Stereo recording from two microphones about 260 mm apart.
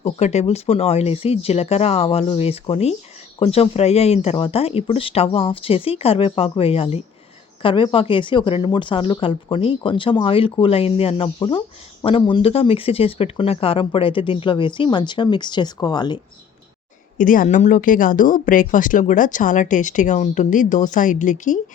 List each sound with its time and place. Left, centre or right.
0.0 s speech: left
17.2 s speech: left